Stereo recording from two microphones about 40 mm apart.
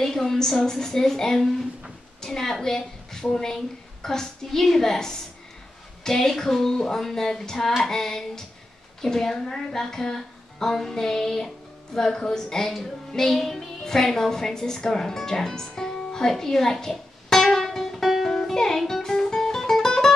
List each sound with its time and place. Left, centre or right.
0.0 s a woman's voice: centre
13.4 s music: centre
13.8 s a woman's voice: centre
14.9 s music: centre
18.0 s music: centre
18.3 s music: centre